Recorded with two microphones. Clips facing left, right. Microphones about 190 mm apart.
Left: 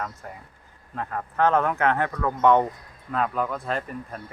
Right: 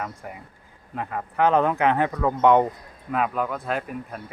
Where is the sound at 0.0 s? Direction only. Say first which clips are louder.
Right 1 dB; 15° right (ahead or behind).